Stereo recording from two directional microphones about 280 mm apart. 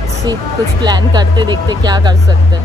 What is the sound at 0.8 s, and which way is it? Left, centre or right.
Speech, centre.